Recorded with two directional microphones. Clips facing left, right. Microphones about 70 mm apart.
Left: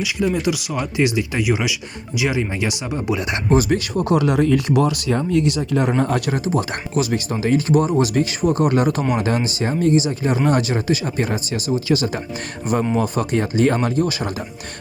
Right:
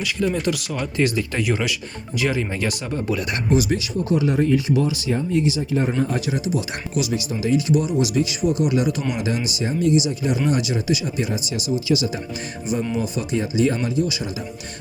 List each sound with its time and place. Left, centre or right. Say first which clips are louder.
0.0 s speech: left 2 dB; centre
3.5 s speech: left 3 dB; left
6.4 s speech: left 3 dB; left